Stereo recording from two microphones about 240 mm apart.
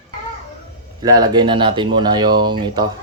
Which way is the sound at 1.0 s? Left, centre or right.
Centre.